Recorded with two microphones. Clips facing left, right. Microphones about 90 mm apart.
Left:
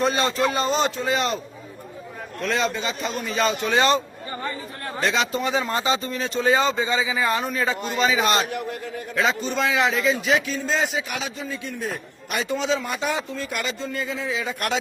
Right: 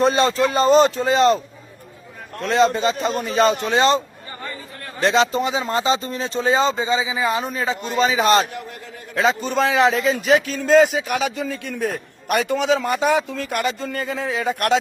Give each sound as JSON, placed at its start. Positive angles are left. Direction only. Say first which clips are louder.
{"t": 0.0, "sound": "speech", "louder": "right 4 dB", "side_deg": -30}
{"t": 2.5, "sound": "speech", "louder": "right 8 dB", "side_deg": -25}
{"t": 5.0, "sound": "speech", "louder": "right 6 dB", "side_deg": -30}
{"t": 7.9, "sound": "speech", "louder": "right 5 dB", "side_deg": -30}
{"t": 8.4, "sound": "a man's voice", "louder": "left 4 dB", "side_deg": 20}
{"t": 9.1, "sound": "a man's voice", "louder": "right 4 dB", "side_deg": -35}